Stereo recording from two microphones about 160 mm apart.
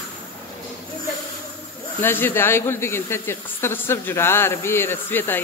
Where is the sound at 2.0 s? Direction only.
15° left (ahead or behind).